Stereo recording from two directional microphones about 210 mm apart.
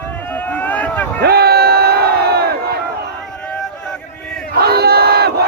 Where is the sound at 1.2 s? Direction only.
50° right (ahead or behind).